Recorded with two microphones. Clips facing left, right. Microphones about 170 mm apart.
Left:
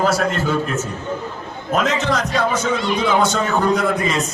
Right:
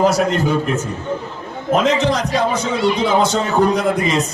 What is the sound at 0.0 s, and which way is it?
Speech, 20° right (ahead or behind).